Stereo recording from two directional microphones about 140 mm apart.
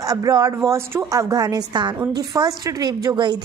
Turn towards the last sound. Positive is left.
turn(degrees=-35)  # may be behind; listen again after turning